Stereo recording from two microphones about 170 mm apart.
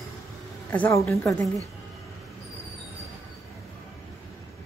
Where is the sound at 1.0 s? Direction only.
Centre (ahead or behind).